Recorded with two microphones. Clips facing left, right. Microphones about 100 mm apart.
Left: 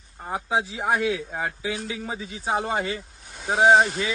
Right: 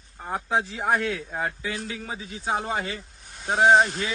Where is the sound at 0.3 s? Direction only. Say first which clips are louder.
Even; 5° left (ahead or behind).